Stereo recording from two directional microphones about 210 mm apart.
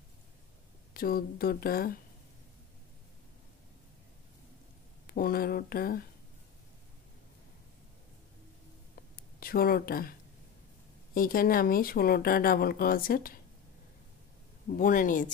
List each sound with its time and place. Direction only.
0.9 s speech: 45° left (ahead or behind)
5.0 s speech: 45° left (ahead or behind)
9.1 s a sound: 45° left (ahead or behind)
11.1 s speech: 45° left (ahead or behind)
14.7 s speech: 40° left (ahead or behind)